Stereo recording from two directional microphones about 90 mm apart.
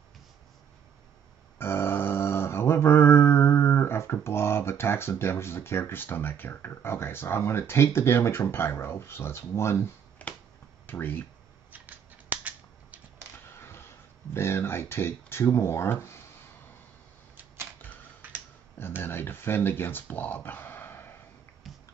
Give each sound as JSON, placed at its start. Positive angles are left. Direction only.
{"t": 1.6, "sound": "mantra", "side_deg": 25}
{"t": 10.9, "sound": "speech", "side_deg": 20}
{"t": 11.7, "sound": "scissors", "side_deg": -20}
{"t": 13.6, "sound": "a sound", "side_deg": 25}
{"t": 14.3, "sound": "speech", "side_deg": 30}
{"t": 18.8, "sound": "a sound", "side_deg": 25}
{"t": 21.7, "sound": "music", "side_deg": 0}